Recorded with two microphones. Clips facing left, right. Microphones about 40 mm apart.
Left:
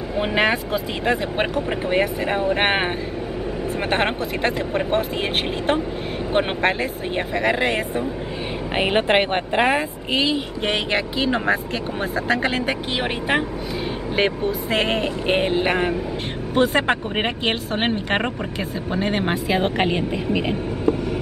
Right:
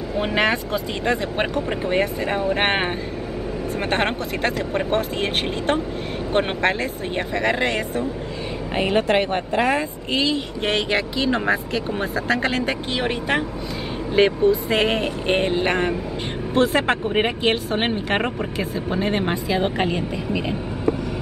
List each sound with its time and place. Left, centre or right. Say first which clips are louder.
0.1 s speech: left 1 dB; centre
3.9 s speech: left 1 dB; centre
6.3 s speech: even; centre
8.7 s speech: left 1 dB; left
10.1 s speech: left 1 dB; centre